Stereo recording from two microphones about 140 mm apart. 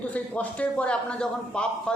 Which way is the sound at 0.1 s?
10° left (ahead or behind).